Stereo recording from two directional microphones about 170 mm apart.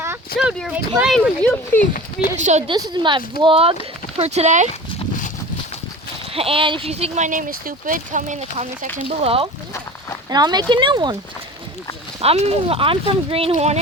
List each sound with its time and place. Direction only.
0.3 s speech: 5° right (ahead or behind)
1.1 s speech: 10° left (ahead or behind)
2.4 s speech: 45° right (ahead or behind)
2.6 s speech: 25° right (ahead or behind); by 4.7 s 45° right (ahead or behind)
6.3 s speech: 35° right (ahead or behind)
10.2 s speech: 25° right (ahead or behind)
12.2 s speech: 35° right (ahead or behind)